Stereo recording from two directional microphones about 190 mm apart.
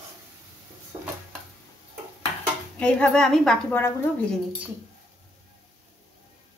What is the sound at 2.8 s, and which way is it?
A woman's voice, 5° left (ahead or behind).